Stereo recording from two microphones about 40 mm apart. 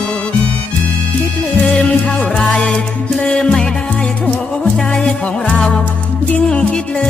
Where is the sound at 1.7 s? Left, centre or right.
Left.